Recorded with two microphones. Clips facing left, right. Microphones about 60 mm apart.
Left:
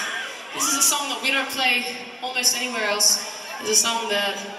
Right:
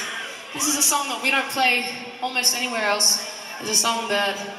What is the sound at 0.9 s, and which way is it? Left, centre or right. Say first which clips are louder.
A man's voice: right 2 dB; right.